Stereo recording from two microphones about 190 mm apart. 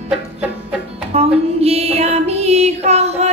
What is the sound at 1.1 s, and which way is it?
Music, 30° right (ahead or behind).